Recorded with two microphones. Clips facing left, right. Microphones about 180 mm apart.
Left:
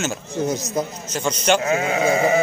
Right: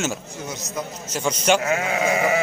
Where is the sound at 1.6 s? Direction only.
25° left (ahead or behind).